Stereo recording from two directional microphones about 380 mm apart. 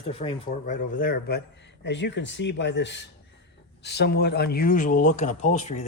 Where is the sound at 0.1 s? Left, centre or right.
Centre.